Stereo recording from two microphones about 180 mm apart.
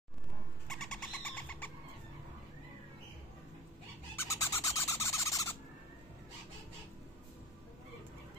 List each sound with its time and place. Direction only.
0.7 s bird: 5° left (ahead or behind)
4.4 s owl: 15° left (ahead or behind)